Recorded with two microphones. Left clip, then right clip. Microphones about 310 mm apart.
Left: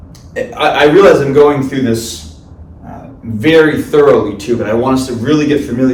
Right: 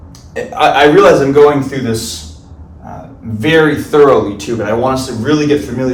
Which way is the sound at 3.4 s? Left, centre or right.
Centre.